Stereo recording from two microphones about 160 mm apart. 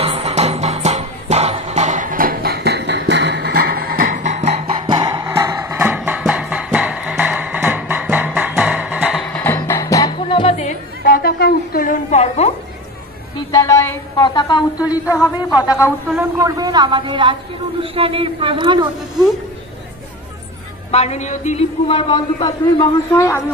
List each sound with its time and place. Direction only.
0.0 s music: 40° right (ahead or behind)
4.8 s music: 25° right (ahead or behind); by 9.2 s 5° right (ahead or behind)
9.2 s music: 10° left (ahead or behind)
10.1 s music: 35° left (ahead or behind)
13.5 s a sound: 20° left (ahead or behind)
14.9 s speech: 20° left (ahead or behind)
16.2 s a woman's voice: 20° right (ahead or behind)
20.9 s a man's voice: 40° left (ahead or behind); by 23.4 s 20° left (ahead or behind)